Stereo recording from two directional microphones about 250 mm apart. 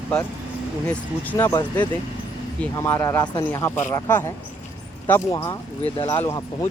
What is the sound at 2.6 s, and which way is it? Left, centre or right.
Speech, centre.